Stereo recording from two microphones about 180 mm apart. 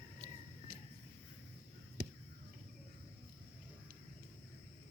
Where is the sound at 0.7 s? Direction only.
60° right (ahead or behind).